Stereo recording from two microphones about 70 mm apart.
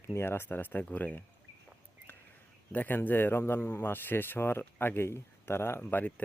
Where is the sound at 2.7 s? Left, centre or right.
Left.